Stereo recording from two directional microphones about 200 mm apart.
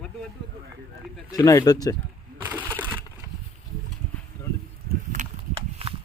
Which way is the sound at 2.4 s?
10° right (ahead or behind).